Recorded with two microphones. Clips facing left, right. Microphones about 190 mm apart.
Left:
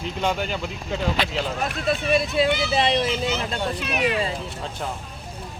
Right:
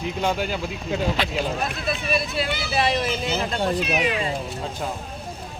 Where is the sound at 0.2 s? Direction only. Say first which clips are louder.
Even; 10° right (ahead or behind).